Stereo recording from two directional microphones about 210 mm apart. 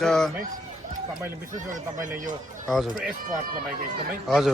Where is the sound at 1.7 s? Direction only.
40° right (ahead or behind).